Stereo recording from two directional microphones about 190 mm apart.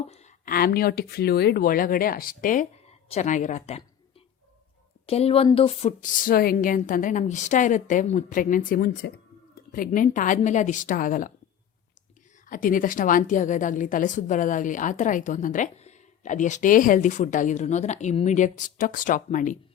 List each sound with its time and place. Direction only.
0.1 s a woman's voice: 35° left (ahead or behind)
5.0 s speech: 30° left (ahead or behind)
6.0 s a woman's voice: 50° left (ahead or behind)
12.5 s a woman's voice: 45° left (ahead or behind)